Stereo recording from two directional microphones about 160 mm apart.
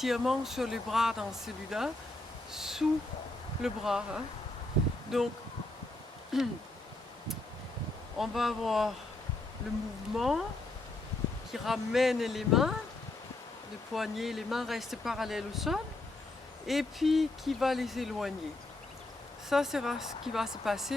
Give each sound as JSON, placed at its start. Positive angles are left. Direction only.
{"t": 0.0, "sound": "speech", "side_deg": 0}
{"t": 2.5, "sound": "a sound", "side_deg": -5}
{"t": 3.6, "sound": "speech", "side_deg": -5}
{"t": 6.3, "sound": "speech", "side_deg": 0}
{"t": 8.2, "sound": "speech", "side_deg": 0}
{"t": 10.2, "sound": "speech", "side_deg": 0}
{"t": 11.5, "sound": "speech", "side_deg": 0}
{"t": 13.9, "sound": "speech", "side_deg": 0}
{"t": 19.5, "sound": "speech", "side_deg": 0}